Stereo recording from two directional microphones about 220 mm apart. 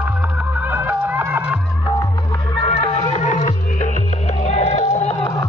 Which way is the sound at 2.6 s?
25° left (ahead or behind).